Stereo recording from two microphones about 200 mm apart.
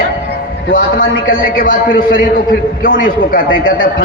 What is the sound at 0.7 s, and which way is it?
A man's voice, 45° left (ahead or behind).